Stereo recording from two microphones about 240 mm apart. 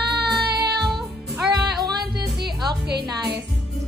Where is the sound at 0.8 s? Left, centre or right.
Centre.